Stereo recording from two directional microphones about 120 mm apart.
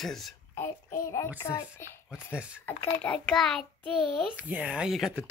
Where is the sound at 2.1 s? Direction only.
10° right (ahead or behind).